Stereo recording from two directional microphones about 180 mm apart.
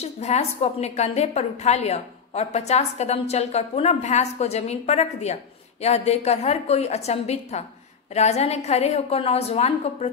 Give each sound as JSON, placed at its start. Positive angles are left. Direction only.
{"t": 0.0, "sound": "a woman's voice", "side_deg": 35}